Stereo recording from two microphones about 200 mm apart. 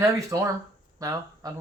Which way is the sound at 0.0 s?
15° right (ahead or behind).